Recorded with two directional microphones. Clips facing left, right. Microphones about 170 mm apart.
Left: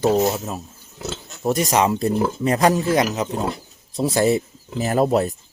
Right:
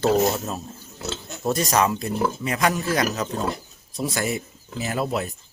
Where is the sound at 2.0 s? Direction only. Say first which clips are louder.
Left 5 dB; 35° left (ahead or behind).